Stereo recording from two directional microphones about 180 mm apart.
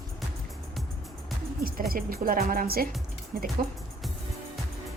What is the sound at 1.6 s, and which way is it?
Speech, 55° right (ahead or behind).